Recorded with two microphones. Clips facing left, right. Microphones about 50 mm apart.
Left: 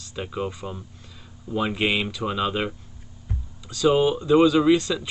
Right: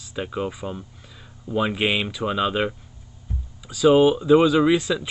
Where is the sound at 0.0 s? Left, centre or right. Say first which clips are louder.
Right 2 dB; centre.